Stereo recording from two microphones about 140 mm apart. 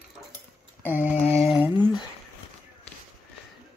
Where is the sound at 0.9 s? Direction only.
10° right (ahead or behind).